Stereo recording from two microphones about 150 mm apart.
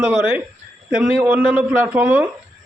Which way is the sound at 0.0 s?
10° right (ahead or behind).